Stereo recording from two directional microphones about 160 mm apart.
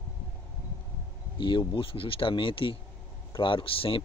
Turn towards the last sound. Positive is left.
turn(degrees=35)  # may be behind; listen again after turning